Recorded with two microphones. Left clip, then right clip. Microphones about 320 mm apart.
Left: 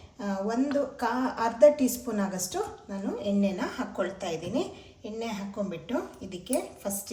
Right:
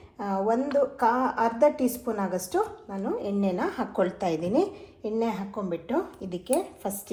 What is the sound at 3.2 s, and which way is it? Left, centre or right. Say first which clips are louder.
A woman's voice: even; centre.